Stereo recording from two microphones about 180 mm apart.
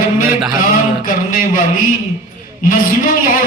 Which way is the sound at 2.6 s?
50° left (ahead or behind).